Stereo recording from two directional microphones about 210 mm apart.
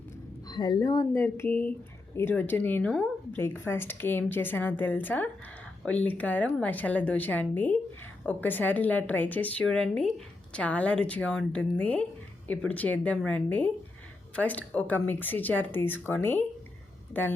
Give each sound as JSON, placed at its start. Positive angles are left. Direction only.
{"t": 0.4, "sound": "a woman's voice", "side_deg": 20}